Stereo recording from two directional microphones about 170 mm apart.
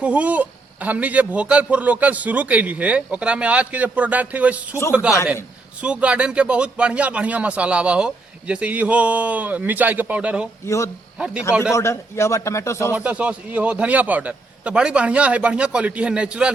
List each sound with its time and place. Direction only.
0.0 s a man's voice: 10° right (ahead or behind)
5.8 s a man's voice: 5° right (ahead or behind)
11.7 s a man's voice: 15° left (ahead or behind)
12.9 s a man's voice: 10° right (ahead or behind)